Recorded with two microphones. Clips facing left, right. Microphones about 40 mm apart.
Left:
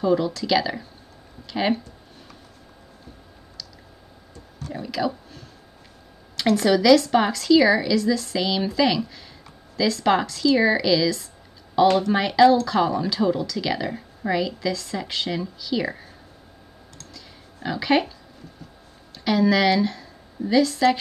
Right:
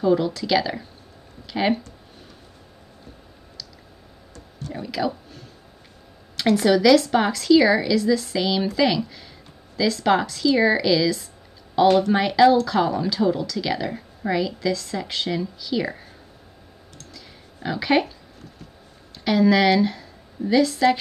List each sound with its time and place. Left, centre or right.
0.0 s speech: centre
4.7 s speech: centre
17.1 s a sound: centre
19.2 s speech: centre